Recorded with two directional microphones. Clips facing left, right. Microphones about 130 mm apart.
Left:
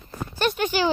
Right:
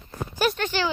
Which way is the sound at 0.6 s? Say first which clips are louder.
Left 3 dB; 15° left (ahead or behind).